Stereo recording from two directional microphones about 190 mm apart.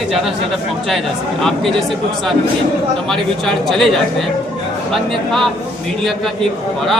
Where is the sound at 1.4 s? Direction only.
Centre (ahead or behind).